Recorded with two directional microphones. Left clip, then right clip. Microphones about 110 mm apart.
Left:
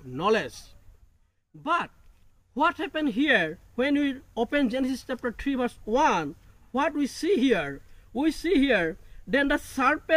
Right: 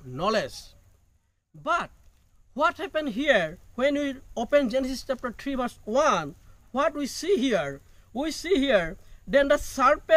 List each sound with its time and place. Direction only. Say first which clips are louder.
0.1 s speech: left 1 dB; 40° right (ahead or behind)
2.5 s speech: even; 40° right (ahead or behind)